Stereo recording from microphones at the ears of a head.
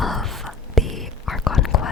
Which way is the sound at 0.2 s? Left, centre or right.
Centre.